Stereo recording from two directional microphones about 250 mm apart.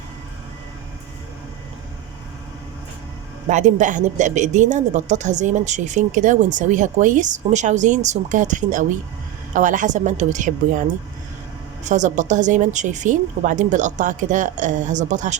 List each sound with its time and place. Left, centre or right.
3.5 s a woman's voice: right